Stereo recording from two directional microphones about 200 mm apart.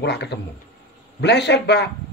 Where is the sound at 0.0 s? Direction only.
60° left (ahead or behind).